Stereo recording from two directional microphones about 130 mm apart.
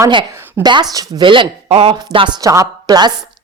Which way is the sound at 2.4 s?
25° right (ahead or behind).